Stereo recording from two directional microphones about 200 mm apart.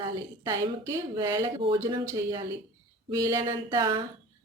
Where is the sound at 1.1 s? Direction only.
20° right (ahead or behind).